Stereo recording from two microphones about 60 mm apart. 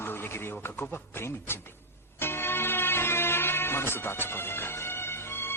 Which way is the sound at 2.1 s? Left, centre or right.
Left.